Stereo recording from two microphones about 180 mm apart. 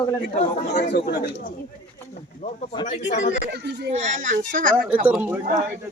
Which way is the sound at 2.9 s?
40° left (ahead or behind).